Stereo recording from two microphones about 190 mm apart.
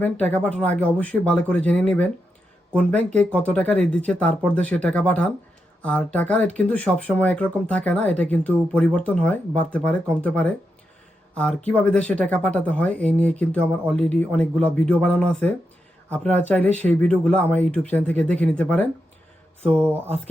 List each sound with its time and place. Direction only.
0.0 s speech: 5° left (ahead or behind)